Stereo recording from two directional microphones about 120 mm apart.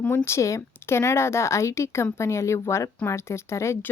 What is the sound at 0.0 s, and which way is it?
Speech, 15° left (ahead or behind).